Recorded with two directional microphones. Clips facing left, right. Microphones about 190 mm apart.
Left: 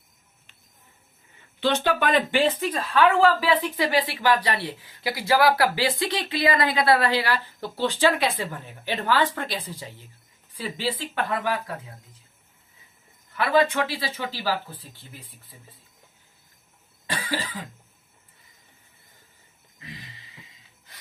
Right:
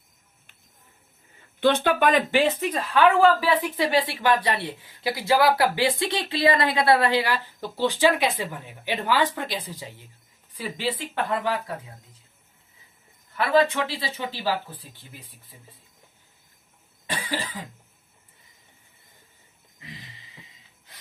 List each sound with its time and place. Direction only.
1.6 s speech: 55° right (ahead or behind)
2.9 s a woman's voice: 20° right (ahead or behind)
13.3 s speech: 25° right (ahead or behind)
17.1 s cough: 20° right (ahead or behind)